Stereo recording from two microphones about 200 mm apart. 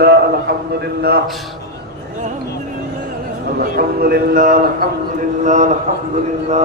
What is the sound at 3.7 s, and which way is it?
A man's voice, 50° right (ahead or behind).